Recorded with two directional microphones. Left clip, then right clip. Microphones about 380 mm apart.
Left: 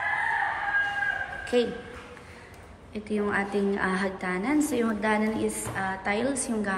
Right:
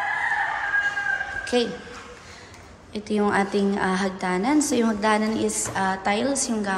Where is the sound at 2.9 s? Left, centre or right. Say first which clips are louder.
Right 5 dB; centre.